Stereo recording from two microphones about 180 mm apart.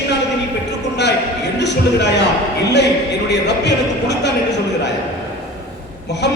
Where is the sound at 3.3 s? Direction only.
70° left (ahead or behind).